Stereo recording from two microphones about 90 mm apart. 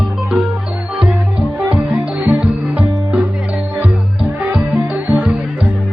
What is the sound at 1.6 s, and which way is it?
Music, 10° right (ahead or behind).